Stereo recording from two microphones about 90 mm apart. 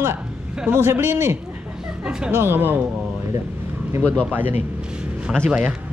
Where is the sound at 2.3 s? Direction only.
25° right (ahead or behind).